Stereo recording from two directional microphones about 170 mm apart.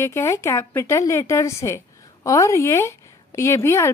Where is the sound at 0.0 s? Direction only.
15° left (ahead or behind).